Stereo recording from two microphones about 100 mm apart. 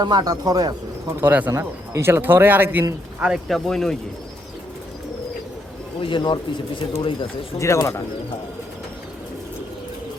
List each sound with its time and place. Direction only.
0.0 s speech: 45° right (ahead or behind)
1.2 s speech: 15° right (ahead or behind)
1.5 s a man's voice: 25° right (ahead or behind)
3.2 s speech: 5° right (ahead or behind)
6.0 s speech: 55° left (ahead or behind)
7.6 s speech: 30° left (ahead or behind)